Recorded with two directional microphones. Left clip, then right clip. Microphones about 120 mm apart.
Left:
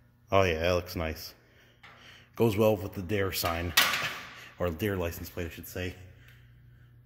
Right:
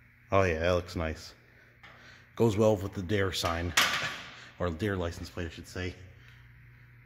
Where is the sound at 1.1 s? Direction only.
25° right (ahead or behind).